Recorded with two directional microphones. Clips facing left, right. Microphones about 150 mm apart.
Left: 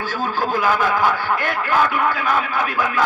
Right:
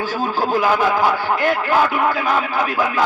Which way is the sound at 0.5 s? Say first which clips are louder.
Right 2 dB; 45° right (ahead or behind).